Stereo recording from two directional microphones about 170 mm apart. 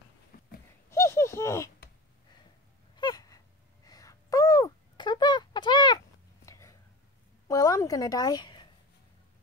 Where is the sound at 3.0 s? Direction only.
25° left (ahead or behind).